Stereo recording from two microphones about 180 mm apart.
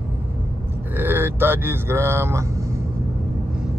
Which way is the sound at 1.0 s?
10° right (ahead or behind).